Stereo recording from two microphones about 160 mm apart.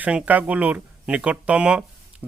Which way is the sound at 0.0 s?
10° right (ahead or behind).